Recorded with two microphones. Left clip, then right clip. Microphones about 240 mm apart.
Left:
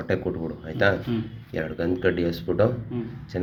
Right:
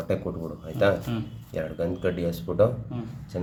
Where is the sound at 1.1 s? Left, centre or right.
Right.